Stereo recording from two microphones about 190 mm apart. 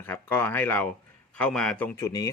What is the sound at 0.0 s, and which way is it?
A man's voice, 10° left (ahead or behind).